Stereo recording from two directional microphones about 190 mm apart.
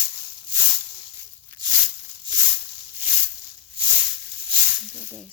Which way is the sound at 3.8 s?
30° right (ahead or behind).